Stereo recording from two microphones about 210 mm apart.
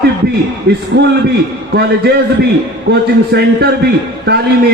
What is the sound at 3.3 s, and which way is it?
Speech, 50° right (ahead or behind).